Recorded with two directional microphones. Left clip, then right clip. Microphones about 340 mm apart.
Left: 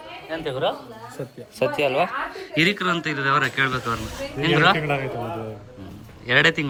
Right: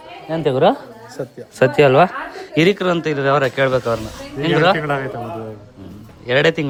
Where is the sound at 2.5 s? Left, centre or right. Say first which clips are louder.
Right 5 dB; centre.